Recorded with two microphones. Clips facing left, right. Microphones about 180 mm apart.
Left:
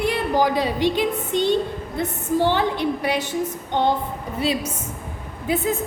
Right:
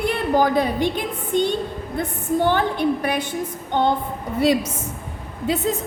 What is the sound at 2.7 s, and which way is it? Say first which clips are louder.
Speech: right 1 dB; 55° right (ahead or behind).